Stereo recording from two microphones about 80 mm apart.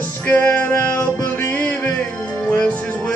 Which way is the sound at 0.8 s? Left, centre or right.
Left.